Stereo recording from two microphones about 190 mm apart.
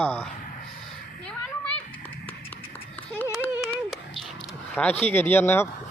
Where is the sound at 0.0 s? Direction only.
10° left (ahead or behind).